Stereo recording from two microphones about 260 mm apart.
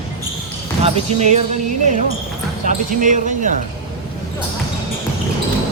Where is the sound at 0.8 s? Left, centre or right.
Right.